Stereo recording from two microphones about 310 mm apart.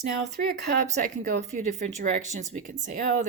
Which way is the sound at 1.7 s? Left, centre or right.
Right.